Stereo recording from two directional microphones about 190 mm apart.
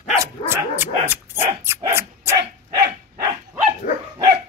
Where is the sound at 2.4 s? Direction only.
60° right (ahead or behind).